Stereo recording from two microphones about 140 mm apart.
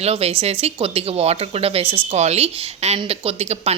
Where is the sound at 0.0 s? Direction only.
45° right (ahead or behind).